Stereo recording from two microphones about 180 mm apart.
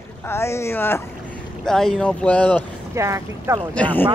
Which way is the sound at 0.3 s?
15° left (ahead or behind).